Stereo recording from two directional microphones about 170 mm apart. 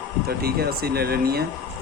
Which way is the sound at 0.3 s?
65° right (ahead or behind).